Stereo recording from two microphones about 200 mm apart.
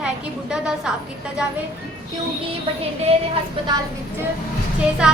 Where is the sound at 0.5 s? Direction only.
5° right (ahead or behind).